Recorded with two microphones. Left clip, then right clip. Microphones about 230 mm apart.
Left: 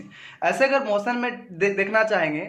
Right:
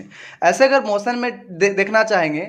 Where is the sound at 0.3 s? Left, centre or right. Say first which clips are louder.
Right 6 dB; right.